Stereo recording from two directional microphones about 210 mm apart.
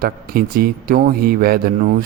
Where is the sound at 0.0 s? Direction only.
45° right (ahead or behind).